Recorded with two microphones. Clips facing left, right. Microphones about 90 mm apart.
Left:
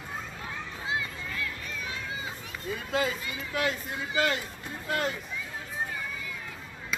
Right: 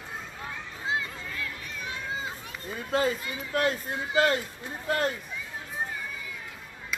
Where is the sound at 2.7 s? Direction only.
40° right (ahead or behind).